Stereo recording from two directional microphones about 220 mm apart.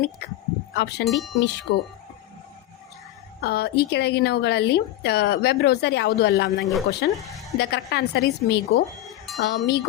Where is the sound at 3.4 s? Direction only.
45° left (ahead or behind).